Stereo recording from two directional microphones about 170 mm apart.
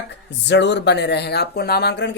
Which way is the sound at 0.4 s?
90° left.